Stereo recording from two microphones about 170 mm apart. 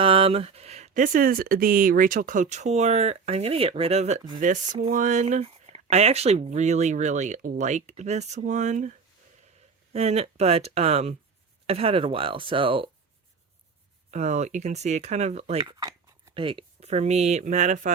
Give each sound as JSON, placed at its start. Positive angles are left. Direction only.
{"t": 0.0, "sound": "speech", "side_deg": -30}
{"t": 14.1, "sound": "speech", "side_deg": -40}
{"t": 15.8, "sound": "speech", "side_deg": -20}